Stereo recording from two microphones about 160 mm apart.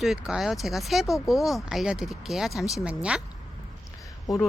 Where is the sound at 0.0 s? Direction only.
5° right (ahead or behind).